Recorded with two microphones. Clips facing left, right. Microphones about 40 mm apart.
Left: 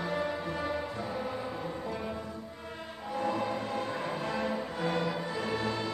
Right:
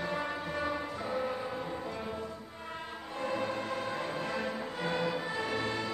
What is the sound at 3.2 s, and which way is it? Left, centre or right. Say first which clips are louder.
Music: left 2 dB; right.